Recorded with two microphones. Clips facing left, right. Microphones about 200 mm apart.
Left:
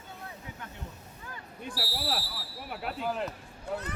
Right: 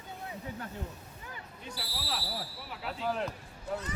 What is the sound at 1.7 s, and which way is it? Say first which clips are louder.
Speech: left 5 dB; 55° left (ahead or behind).